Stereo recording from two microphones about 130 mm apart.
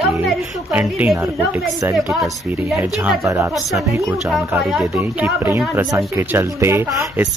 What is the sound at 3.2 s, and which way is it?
Speech, 25° right (ahead or behind).